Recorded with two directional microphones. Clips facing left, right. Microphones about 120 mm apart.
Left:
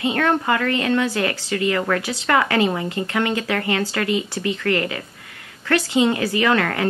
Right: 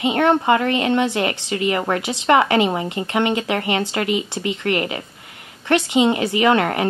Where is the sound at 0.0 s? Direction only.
20° right (ahead or behind).